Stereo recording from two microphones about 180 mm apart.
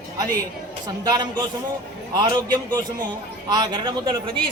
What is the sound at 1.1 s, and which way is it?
Speech, 25° right (ahead or behind).